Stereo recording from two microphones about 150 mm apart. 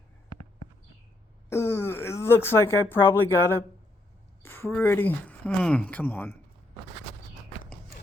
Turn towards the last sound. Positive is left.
turn(degrees=10)  # may be behind; listen again after turning